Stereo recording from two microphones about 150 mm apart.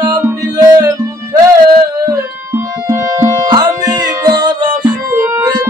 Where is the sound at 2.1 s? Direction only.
20° right (ahead or behind).